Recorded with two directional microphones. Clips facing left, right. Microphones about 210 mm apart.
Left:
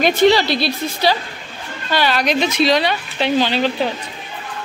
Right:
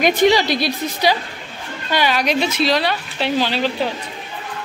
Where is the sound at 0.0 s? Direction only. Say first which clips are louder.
Left 1 dB; 15° right (ahead or behind).